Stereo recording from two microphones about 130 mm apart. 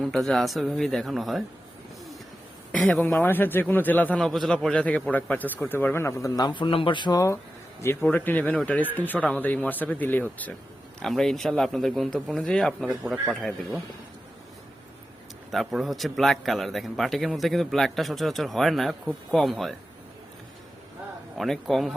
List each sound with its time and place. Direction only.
0.0 s a man's voice: centre (ahead or behind)
2.7 s speech: 10° left (ahead or behind)
4.2 s speech: centre (ahead or behind); by 7.3 s 25° left (ahead or behind)
8.1 s a man's voice: 15° left (ahead or behind)
15.5 s a man's voice: centre (ahead or behind)
21.3 s a man's voice: centre (ahead or behind)